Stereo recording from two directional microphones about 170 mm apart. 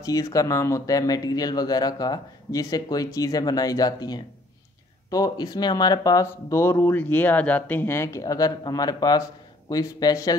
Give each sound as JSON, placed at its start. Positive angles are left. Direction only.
{"t": 0.0, "sound": "speech", "side_deg": 20}